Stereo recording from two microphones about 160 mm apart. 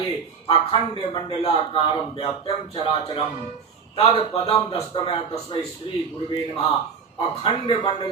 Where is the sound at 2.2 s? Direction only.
35° left (ahead or behind).